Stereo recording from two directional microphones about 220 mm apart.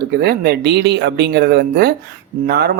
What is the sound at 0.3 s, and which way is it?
Speech, 45° right (ahead or behind).